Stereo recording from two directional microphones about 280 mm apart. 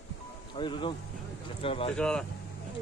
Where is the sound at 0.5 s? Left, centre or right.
Centre.